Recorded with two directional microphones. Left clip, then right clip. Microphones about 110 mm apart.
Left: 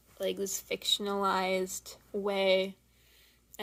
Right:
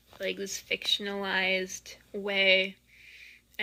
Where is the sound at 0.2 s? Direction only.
30° left (ahead or behind).